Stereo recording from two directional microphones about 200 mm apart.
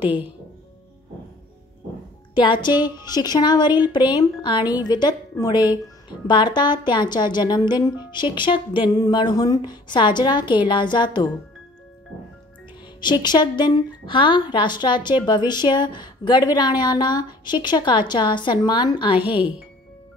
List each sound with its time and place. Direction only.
2.3 s a woman's voice: 25° left (ahead or behind)
13.0 s a woman's voice: 20° left (ahead or behind)